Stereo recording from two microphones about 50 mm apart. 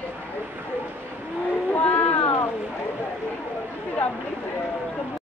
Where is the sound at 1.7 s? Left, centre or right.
Left.